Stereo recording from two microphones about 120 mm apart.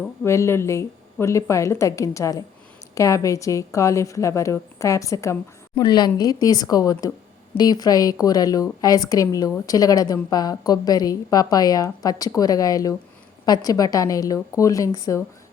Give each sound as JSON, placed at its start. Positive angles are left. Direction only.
{"t": 0.3, "sound": "a woman's voice", "side_deg": 20}